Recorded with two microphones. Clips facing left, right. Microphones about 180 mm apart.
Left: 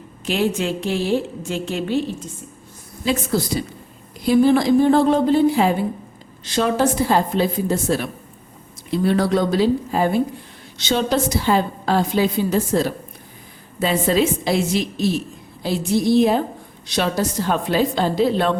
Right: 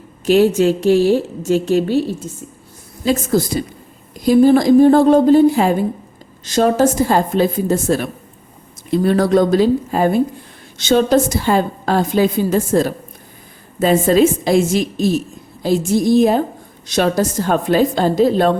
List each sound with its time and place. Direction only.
0.3 s a woman's voice: 40° right (ahead or behind)